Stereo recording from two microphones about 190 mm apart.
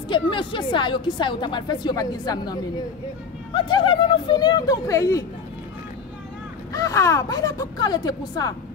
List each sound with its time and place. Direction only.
0.1 s speech: 25° left (ahead or behind)
6.7 s speech: 15° left (ahead or behind)